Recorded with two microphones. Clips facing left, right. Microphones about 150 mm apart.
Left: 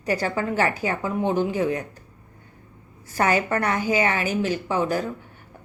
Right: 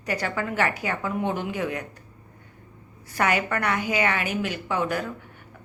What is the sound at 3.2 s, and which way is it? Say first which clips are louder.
Speech: left 3 dB; 30° left (ahead or behind).